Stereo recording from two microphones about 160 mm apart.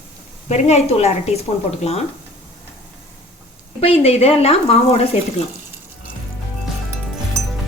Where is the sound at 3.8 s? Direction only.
35° left (ahead or behind).